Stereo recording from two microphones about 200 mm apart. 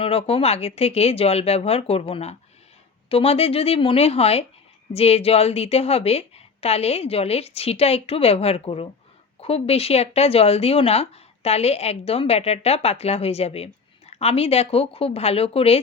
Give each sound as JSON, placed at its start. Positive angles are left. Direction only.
{"t": 0.0, "sound": "a woman's voice", "side_deg": 30}